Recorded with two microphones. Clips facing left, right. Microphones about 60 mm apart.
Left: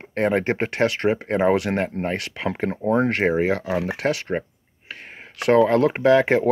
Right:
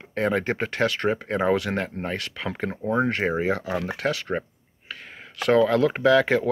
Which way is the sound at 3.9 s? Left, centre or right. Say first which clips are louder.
Left 3 dB; left.